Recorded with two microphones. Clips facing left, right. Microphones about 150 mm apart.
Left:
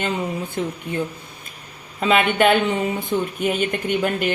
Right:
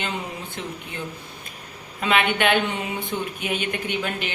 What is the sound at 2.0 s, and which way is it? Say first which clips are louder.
Speech: left 4 dB; 45° left (ahead or behind).